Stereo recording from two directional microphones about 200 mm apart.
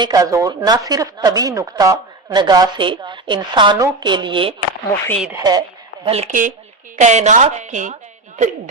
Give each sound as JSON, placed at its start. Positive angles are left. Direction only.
{"t": 0.0, "sound": "speech", "side_deg": -20}
{"t": 4.9, "sound": "speech", "side_deg": 10}
{"t": 5.4, "sound": "speech", "side_deg": -20}
{"t": 6.1, "sound": "a woman's voice", "side_deg": -35}